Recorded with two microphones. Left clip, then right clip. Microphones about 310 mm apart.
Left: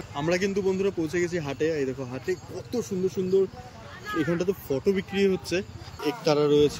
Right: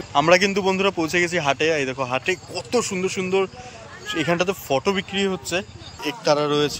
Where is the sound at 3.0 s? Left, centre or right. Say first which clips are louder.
Right 2 dB; centre.